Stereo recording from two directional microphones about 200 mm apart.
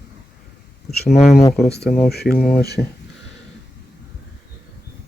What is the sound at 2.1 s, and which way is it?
Speech, 50° left (ahead or behind).